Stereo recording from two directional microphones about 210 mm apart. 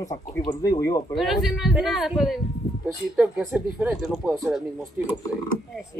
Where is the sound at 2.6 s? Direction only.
35° left (ahead or behind).